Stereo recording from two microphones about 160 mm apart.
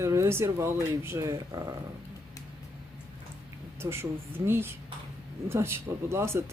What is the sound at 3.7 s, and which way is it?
Speech, 15° right (ahead or behind).